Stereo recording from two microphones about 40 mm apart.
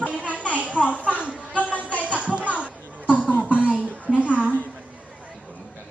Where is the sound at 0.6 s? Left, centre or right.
Right.